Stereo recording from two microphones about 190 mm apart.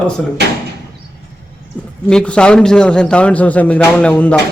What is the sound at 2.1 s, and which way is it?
A man's voice, 5° left (ahead or behind).